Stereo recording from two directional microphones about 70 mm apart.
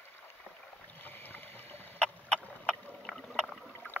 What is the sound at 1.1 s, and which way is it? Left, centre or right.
Boat, left.